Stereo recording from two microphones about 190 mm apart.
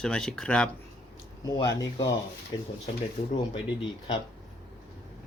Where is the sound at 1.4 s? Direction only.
20° left (ahead or behind).